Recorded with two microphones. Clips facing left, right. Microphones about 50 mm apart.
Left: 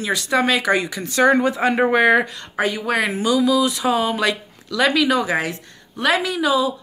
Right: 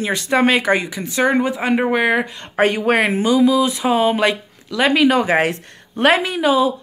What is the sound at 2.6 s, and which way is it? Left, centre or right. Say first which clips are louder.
Speech: right 5 dB; right.